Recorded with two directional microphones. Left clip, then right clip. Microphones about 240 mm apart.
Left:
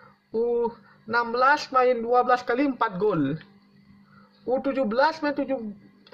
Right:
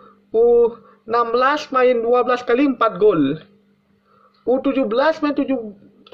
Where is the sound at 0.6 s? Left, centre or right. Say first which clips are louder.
Right 11 dB; centre.